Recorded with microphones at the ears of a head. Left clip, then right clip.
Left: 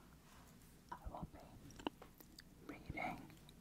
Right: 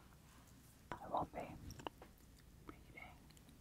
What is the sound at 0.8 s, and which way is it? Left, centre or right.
Whispering, right.